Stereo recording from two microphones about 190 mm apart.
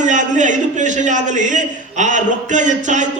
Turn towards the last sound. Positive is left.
turn(degrees=-40)  # may be behind; listen again after turning